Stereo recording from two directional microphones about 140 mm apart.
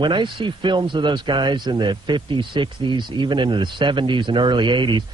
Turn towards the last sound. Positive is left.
turn(degrees=-35)  # may be behind; listen again after turning